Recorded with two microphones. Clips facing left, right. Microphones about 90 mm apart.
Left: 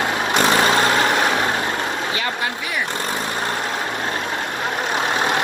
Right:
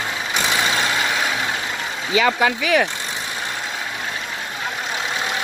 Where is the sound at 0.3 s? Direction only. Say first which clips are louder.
Left 5 dB; 50° left (ahead or behind).